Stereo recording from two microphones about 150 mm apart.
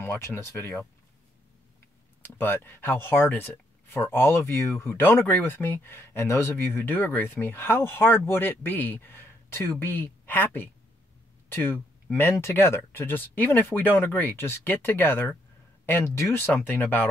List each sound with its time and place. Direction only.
0.0 s speech: 15° left (ahead or behind)
2.2 s speech: 15° left (ahead or behind)